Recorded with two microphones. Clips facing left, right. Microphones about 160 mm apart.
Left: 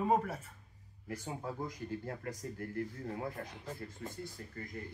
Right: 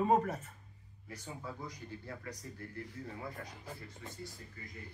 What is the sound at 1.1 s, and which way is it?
Speech, 50° left (ahead or behind).